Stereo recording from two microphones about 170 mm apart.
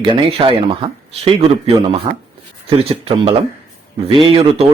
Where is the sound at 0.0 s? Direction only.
30° right (ahead or behind).